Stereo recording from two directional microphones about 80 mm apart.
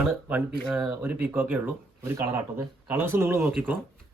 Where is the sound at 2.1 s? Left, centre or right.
Right.